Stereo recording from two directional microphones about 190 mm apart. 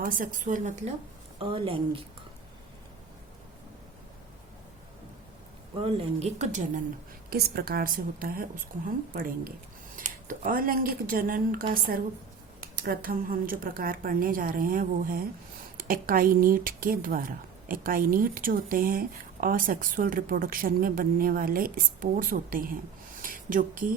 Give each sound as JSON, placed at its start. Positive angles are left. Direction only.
{"t": 0.0, "sound": "speech", "side_deg": -45}
{"t": 1.4, "sound": "a woman's voice", "side_deg": -30}
{"t": 5.8, "sound": "a woman's voice", "side_deg": -35}
{"t": 7.3, "sound": "speech", "side_deg": -55}
{"t": 23.2, "sound": "a sound", "side_deg": -45}